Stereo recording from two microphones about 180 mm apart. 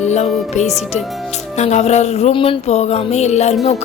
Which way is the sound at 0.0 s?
40° left (ahead or behind).